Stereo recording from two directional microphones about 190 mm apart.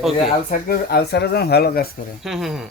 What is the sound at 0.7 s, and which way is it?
Speech, 55° left (ahead or behind).